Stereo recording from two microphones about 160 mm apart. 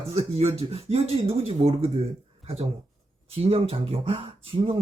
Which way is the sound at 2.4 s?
40° right (ahead or behind).